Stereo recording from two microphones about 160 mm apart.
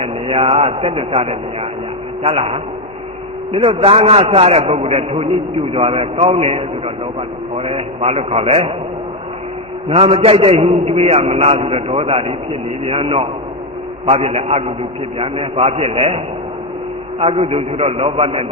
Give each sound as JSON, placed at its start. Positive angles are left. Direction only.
{"t": 0.0, "sound": "a man's voice", "side_deg": -35}
{"t": 9.9, "sound": "a man's voice", "side_deg": -35}